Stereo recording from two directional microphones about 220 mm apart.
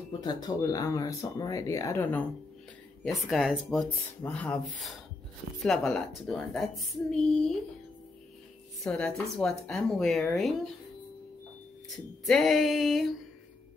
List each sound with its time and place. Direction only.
0.2 s speech: 20° left (ahead or behind); by 7.5 s centre (ahead or behind)
8.8 s speech: 5° left (ahead or behind)
12.3 s speech: centre (ahead or behind)